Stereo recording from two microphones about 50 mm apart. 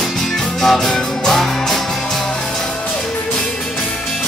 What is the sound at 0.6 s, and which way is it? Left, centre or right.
Music, centre.